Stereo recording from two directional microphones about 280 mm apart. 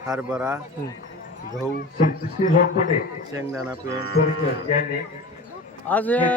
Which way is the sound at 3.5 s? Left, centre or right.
Centre.